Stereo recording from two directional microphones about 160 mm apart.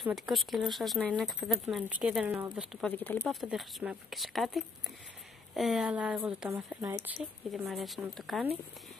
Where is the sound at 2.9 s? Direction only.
10° left (ahead or behind).